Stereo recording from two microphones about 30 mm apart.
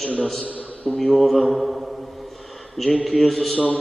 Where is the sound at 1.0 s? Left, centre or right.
Centre.